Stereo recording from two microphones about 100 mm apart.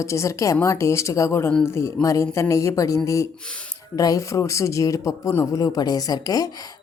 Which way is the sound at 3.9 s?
35° left (ahead or behind).